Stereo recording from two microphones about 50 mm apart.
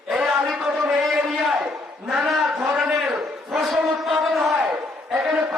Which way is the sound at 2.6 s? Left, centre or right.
Centre.